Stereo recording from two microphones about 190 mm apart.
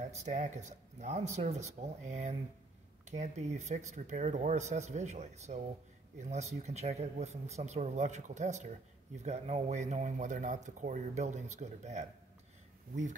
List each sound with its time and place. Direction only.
0.0 s speech: 40° right (ahead or behind)